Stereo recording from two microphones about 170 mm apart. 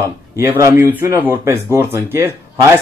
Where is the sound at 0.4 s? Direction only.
15° right (ahead or behind).